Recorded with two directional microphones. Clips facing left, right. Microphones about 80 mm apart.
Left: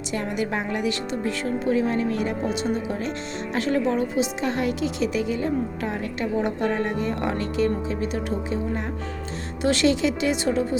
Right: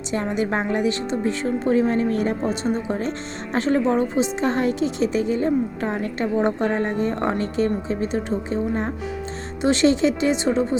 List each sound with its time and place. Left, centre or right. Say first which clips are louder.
0.1 s a woman's voice: right 4 dB; right
9.6 s a woman's voice: right 3 dB; right